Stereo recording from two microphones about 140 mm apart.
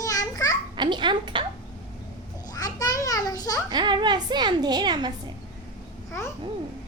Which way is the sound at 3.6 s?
30° right (ahead or behind).